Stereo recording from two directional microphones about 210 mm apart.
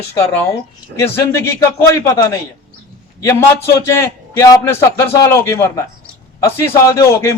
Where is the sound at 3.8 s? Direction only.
15° left (ahead or behind).